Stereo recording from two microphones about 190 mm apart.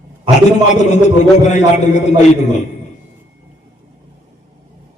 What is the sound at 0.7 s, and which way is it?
A man's voice, 40° left (ahead or behind).